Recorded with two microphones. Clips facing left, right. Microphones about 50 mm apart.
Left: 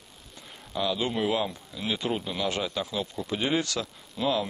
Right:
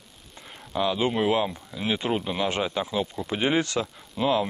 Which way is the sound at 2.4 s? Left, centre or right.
Right.